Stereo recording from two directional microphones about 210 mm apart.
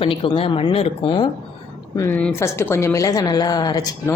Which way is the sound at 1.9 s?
10° left (ahead or behind).